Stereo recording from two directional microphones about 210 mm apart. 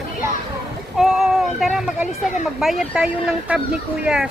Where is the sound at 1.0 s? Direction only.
Centre (ahead or behind).